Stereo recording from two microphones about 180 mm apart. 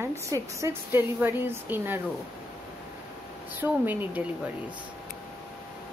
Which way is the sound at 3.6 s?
10° right (ahead or behind).